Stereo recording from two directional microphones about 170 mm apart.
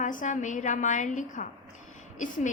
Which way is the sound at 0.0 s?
50° left (ahead or behind).